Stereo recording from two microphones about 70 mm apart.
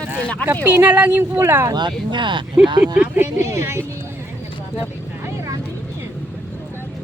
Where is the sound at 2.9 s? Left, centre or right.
Right.